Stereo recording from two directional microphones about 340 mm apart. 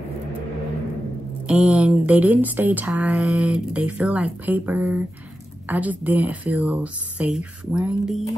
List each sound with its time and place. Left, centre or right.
1.5 s speech: centre